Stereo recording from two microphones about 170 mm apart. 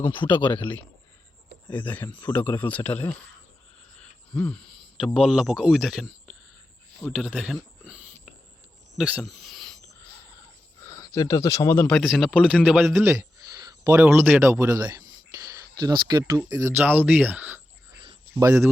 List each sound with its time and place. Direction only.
0.1 s speech: 30° left (ahead or behind)
1.7 s speech: 10° left (ahead or behind)
3.9 s a sound: 5° left (ahead or behind)
4.9 s speech: centre (ahead or behind)
9.0 s a sound: centre (ahead or behind)
10.9 s speech: 20° left (ahead or behind); by 13.1 s 5° right (ahead or behind)
13.1 s a sound: 20° right (ahead or behind)
13.9 s speech: 10° right (ahead or behind)
18.0 s cricket: 30° right (ahead or behind)
18.4 s speech: 15° right (ahead or behind)